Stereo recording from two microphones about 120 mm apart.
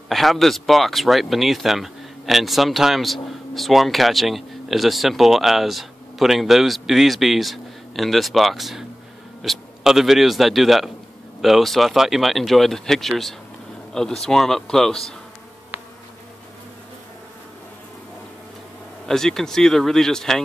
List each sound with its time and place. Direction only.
0.1 s a man's voice: centre (ahead or behind)
15.7 s insect: 15° right (ahead or behind)
19.0 s speech: 5° left (ahead or behind)